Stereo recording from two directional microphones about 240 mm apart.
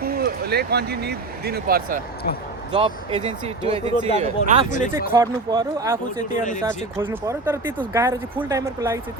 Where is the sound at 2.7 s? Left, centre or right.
Right.